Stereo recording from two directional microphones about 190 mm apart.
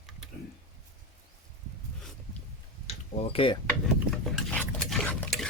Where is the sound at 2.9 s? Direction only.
30° left (ahead or behind).